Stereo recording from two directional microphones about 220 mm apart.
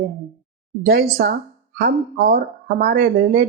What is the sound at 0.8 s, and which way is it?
Speech, 45° right (ahead or behind).